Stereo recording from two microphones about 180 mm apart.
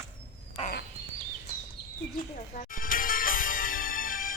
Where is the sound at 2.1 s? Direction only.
50° left (ahead or behind).